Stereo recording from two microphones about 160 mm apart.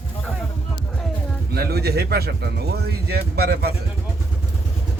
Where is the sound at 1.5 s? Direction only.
80° right.